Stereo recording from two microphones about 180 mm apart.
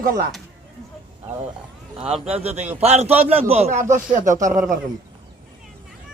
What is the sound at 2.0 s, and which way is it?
Speech, 5° right (ahead or behind).